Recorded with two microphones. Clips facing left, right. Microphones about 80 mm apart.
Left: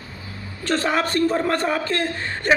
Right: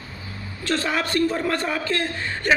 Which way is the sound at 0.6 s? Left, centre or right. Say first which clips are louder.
Left 3 dB; left.